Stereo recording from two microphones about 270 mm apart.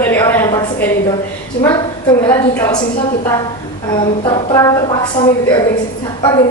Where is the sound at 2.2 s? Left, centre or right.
Centre.